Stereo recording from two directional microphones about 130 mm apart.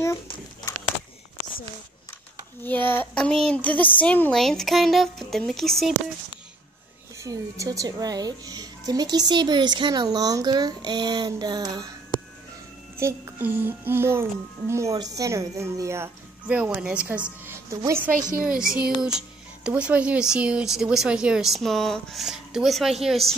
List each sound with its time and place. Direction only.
2.6 s child singing: 15° left (ahead or behind)
4.0 s speech: 10° left (ahead or behind)
7.2 s a child's voice: 25° right (ahead or behind)
12.9 s a child's voice: 20° right (ahead or behind)
16.4 s a child's voice: 10° right (ahead or behind)
17.6 s a woman's voice: 25° right (ahead or behind)
18.4 s speech: 5° right (ahead or behind)